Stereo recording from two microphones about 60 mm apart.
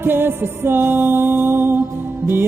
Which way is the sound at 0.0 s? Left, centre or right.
Right.